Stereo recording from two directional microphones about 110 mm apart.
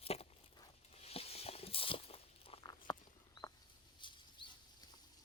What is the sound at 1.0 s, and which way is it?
Walk, 65° left (ahead or behind).